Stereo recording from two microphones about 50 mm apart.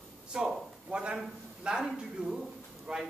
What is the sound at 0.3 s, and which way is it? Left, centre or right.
A man's voice, centre.